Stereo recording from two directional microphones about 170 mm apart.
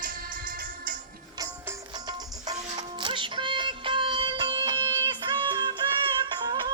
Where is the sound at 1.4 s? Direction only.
20° right (ahead or behind).